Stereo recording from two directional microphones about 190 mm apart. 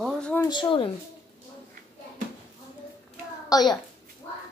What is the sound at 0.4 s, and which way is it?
Speech, 25° left (ahead or behind).